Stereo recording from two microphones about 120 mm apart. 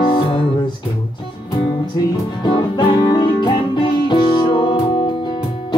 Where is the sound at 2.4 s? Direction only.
40° left (ahead or behind).